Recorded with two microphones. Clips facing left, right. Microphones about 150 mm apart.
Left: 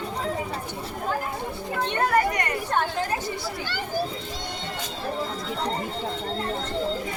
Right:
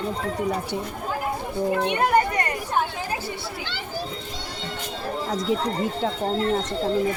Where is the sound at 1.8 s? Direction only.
15° right (ahead or behind).